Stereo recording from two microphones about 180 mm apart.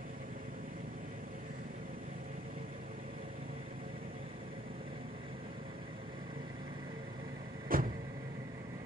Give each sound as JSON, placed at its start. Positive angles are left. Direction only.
{"t": 7.6, "sound": "vehicle", "side_deg": -50}